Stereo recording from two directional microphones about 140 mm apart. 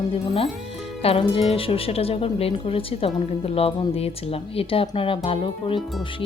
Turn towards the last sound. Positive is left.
turn(degrees=40)  # may be behind; listen again after turning